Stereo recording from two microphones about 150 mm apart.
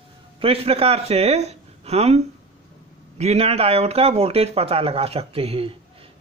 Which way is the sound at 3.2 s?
45° right (ahead or behind).